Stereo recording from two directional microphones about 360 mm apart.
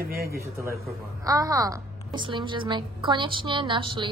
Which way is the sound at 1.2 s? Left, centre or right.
Centre.